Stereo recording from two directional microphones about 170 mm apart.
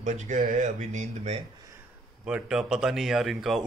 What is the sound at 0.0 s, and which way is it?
Speech, 45° right (ahead or behind).